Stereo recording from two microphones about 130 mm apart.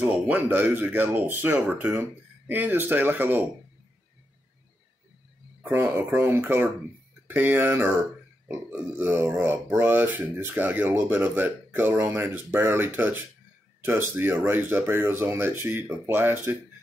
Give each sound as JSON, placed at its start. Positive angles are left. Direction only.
{"t": 0.0, "sound": "speech", "side_deg": -15}
{"t": 5.6, "sound": "speech", "side_deg": -15}